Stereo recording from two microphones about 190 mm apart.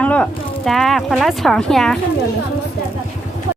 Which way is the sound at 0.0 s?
5° left (ahead or behind).